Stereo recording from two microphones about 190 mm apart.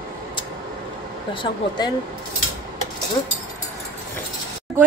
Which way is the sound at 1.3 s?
25° left (ahead or behind).